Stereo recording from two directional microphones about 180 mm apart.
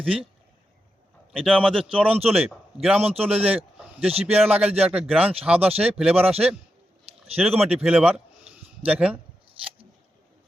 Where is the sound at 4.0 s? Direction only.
35° right (ahead or behind).